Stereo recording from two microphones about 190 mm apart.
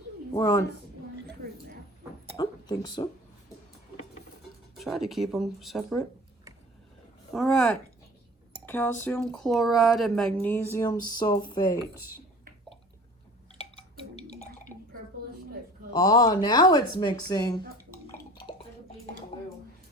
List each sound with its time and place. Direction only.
0.3 s speech: 20° left (ahead or behind)
2.3 s a sound: 20° left (ahead or behind)
4.7 s speech: centre (ahead or behind)
7.3 s speech: centre (ahead or behind); by 11.8 s 20° left (ahead or behind)
14.3 s drip: 35° left (ahead or behind)
15.9 s speech: 20° left (ahead or behind)